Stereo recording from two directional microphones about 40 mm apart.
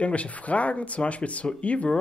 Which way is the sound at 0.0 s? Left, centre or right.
Left.